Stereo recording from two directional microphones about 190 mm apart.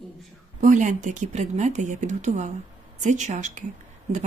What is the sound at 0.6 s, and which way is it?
Speech, 40° right (ahead or behind).